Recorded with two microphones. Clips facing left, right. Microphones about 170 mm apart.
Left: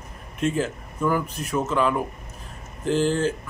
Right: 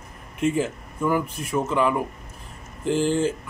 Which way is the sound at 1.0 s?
5° right (ahead or behind).